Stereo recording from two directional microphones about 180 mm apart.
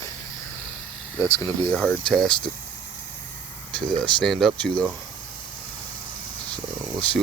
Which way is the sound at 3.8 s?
5° left (ahead or behind).